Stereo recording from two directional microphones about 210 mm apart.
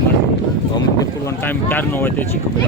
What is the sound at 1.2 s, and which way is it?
Speech, 10° left (ahead or behind).